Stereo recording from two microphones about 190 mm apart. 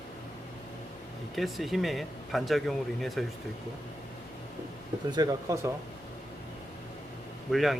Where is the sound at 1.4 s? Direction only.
Centre (ahead or behind).